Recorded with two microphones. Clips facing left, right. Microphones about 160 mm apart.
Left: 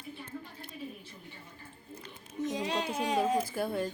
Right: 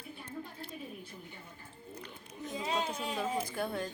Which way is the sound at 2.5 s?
75° left (ahead or behind).